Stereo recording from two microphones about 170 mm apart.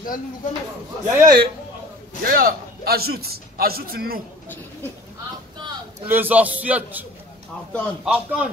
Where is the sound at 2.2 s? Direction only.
60° right (ahead or behind).